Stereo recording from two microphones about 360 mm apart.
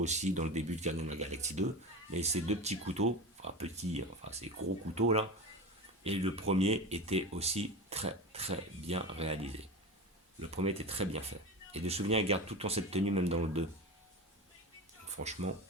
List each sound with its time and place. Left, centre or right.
0.0 s speech: centre
15.1 s speech: centre